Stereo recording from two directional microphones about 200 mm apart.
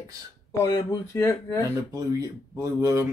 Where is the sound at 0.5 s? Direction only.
15° left (ahead or behind).